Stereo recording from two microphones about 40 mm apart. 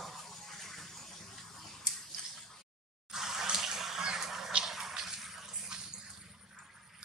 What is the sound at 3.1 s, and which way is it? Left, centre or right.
Water tap, centre.